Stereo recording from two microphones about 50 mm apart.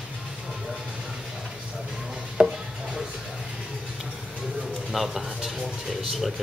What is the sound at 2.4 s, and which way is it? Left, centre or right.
Chopping, right.